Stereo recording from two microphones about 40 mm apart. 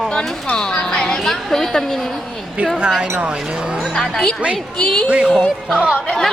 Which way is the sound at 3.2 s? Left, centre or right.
Centre.